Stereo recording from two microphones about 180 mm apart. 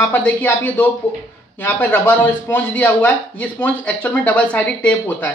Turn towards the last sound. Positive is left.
turn(degrees=10)  # may be behind; listen again after turning